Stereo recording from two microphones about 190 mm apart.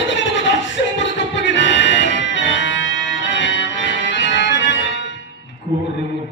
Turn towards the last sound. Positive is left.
turn(degrees=70)  # may be behind; listen again after turning